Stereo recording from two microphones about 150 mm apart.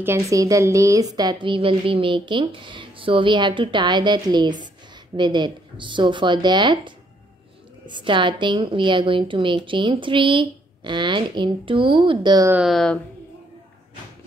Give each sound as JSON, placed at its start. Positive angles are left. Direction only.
{"t": 0.0, "sound": "a woman's voice", "side_deg": -20}
{"t": 12.6, "sound": "speech", "side_deg": 5}